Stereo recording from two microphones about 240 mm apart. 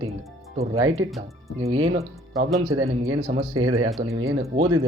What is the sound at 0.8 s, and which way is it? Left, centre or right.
Speech, right.